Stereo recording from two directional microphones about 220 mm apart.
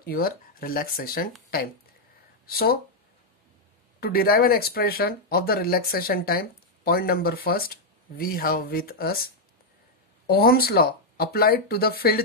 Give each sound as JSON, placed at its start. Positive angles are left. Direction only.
{"t": 0.0, "sound": "speech", "side_deg": 40}
{"t": 2.4, "sound": "speech", "side_deg": 45}
{"t": 4.0, "sound": "speech", "side_deg": 40}